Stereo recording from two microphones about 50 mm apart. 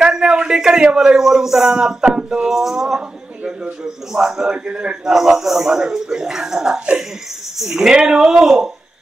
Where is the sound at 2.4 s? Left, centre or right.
Centre.